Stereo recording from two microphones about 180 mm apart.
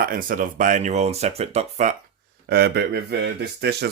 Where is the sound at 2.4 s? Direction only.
65° right (ahead or behind).